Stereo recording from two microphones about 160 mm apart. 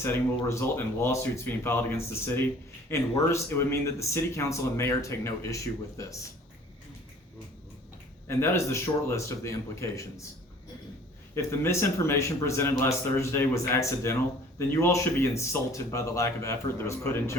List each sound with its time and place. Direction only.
0.0 s speech: 15° left (ahead or behind)
8.3 s speech: 15° left (ahead or behind)
11.3 s speech: 15° left (ahead or behind)